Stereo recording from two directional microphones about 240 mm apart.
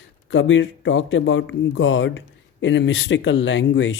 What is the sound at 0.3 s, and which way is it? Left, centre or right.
Speech, left.